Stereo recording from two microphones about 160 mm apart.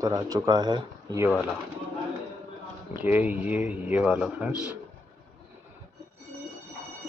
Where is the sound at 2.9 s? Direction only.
10° right (ahead or behind).